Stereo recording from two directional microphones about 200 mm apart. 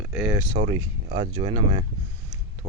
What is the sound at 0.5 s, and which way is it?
Speech, 25° right (ahead or behind).